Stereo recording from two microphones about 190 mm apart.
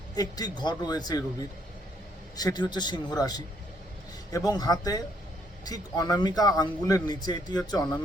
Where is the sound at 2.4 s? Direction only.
20° left (ahead or behind).